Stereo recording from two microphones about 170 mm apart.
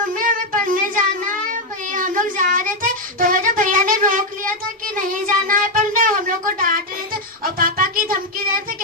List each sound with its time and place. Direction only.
0.1 s child singing: 55° right (ahead or behind)